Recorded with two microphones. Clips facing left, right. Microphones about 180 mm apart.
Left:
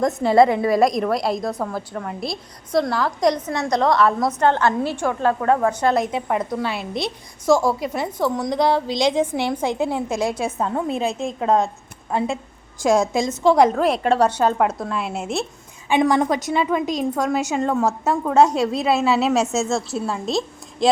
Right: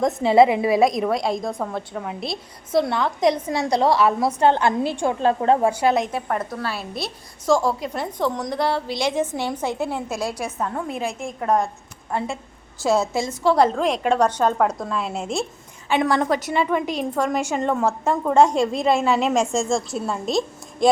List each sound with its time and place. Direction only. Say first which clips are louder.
0.0 s a woman's voice: even; centre (ahead or behind); by 5.7 s 20° right (ahead or behind)
5.7 s a woman's voice: even; 10° right (ahead or behind)
6.1 s a woman's voice: left 3 dB; 15° left (ahead or behind)
12.8 s a woman's voice: left 3 dB; 15° left (ahead or behind)
16.8 s a woman's voice: left 3 dB; 10° right (ahead or behind)
17.2 s a woman's voice: left 1 dB; 10° left (ahead or behind)